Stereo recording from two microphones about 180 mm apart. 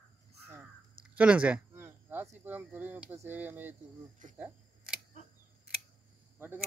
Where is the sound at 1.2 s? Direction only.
5° right (ahead or behind).